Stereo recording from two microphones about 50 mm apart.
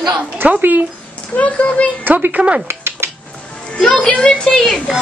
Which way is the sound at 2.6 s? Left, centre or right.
Right.